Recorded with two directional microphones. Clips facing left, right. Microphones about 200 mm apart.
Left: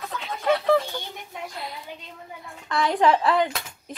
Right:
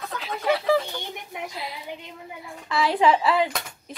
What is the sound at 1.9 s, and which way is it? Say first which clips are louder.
Speech: right 3 dB; 15° right (ahead or behind).